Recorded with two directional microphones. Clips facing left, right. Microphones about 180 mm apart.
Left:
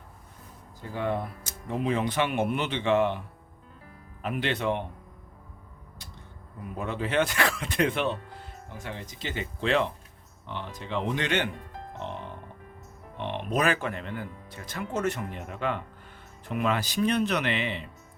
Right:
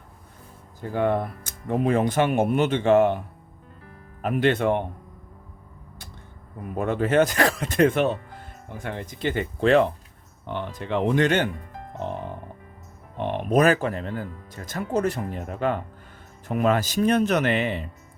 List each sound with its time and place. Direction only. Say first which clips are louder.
0.8 s speech: right 7 dB; 55° right (ahead or behind)
4.2 s speech: right 8 dB; 50° right (ahead or behind)
6.7 s speech: right 7 dB; 50° right (ahead or behind)
8.8 s speech: right 9 dB; 55° right (ahead or behind)
11.9 s music: right 7 dB; 45° right (ahead or behind)
13.1 s speech: right 7 dB; 45° right (ahead or behind)